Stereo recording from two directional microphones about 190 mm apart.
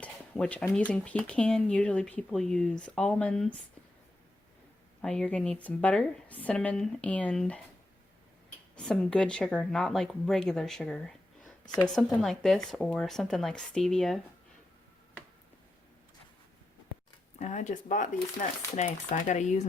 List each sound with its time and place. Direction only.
0.0 s speech: 5° left (ahead or behind)
5.0 s speech: 5° left (ahead or behind)
8.7 s speech: 5° left (ahead or behind)
11.6 s speech: 20° left (ahead or behind)
11.9 s speech: centre (ahead or behind)
17.4 s speech: 40° left (ahead or behind)